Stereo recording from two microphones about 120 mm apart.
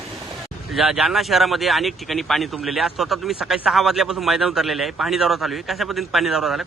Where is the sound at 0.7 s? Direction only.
5° right (ahead or behind).